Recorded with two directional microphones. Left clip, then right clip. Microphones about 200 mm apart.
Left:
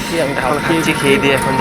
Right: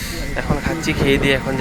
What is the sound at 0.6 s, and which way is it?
Speech, 10° left (ahead or behind).